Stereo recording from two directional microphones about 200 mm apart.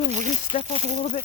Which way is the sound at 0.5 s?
40° left (ahead or behind).